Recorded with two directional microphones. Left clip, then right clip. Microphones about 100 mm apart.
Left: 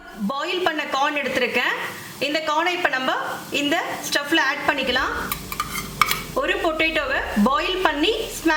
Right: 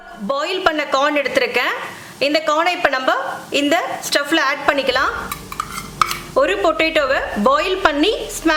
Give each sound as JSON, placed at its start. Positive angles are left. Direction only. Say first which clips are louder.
{"t": 0.3, "sound": "a woman's voice", "louder": "right 5 dB", "side_deg": -50}
{"t": 5.5, "sound": "a sound", "louder": "right 2 dB", "side_deg": 0}
{"t": 6.7, "sound": "a woman's voice", "louder": "right 5 dB", "side_deg": -55}